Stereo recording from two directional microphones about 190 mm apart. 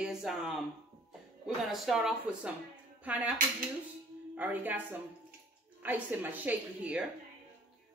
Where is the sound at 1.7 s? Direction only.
Centre (ahead or behind).